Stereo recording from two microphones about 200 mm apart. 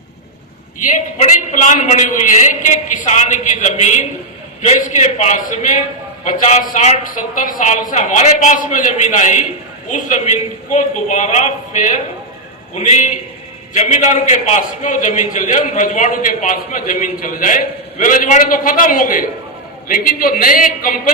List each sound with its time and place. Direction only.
0.9 s a man's voice: 40° left (ahead or behind)